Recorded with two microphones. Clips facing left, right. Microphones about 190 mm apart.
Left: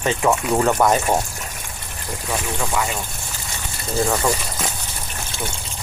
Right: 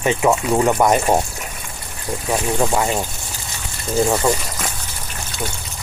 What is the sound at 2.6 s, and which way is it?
Speech, 35° right (ahead or behind).